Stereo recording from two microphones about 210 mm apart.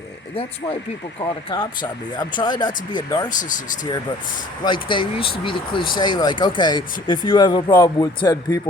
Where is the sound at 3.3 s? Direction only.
40° left (ahead or behind).